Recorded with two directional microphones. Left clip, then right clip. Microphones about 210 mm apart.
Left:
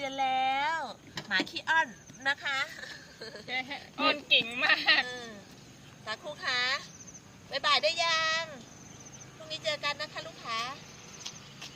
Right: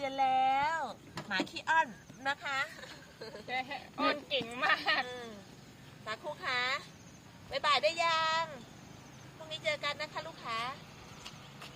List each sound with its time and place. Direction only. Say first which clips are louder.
0.0 s a sound: even; centre (ahead or behind)
3.4 s speech: left 2 dB; 30° right (ahead or behind)
5.0 s speech: left 3 dB; 5° right (ahead or behind)
9.5 s speech: left 2 dB; centre (ahead or behind)